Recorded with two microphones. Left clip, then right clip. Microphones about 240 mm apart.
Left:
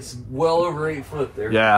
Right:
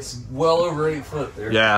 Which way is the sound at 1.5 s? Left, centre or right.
Centre.